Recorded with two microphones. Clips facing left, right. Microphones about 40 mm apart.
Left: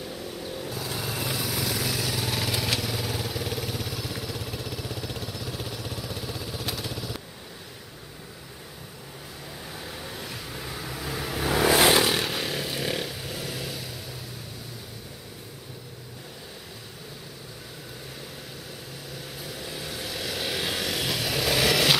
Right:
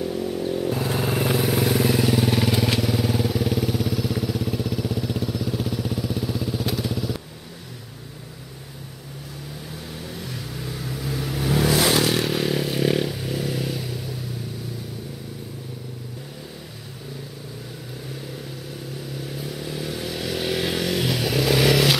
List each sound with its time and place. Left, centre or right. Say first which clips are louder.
0.0 s vehicle: right 10 dB; centre
0.7 s vehicle: right 9 dB; right
2.1 s vehicle: right 8 dB; centre
9.8 s vehicle: right 3 dB; centre
11.9 s motorcycle: right 2 dB; centre
19.2 s vehicle: right 5 dB; centre